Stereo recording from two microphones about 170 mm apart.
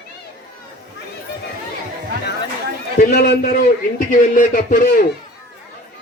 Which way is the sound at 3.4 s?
55° left (ahead or behind).